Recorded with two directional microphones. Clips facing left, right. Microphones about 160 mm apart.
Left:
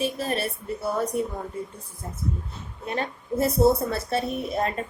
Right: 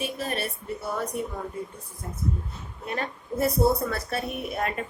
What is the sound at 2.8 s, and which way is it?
A woman's voice, 25° left (ahead or behind).